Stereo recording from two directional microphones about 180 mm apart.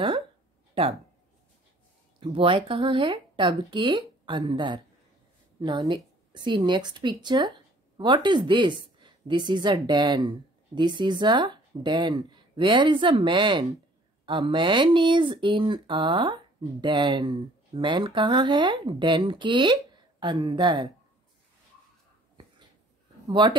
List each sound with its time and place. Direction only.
2.1 s a woman's voice: 30° right (ahead or behind)
23.2 s speech: 25° right (ahead or behind)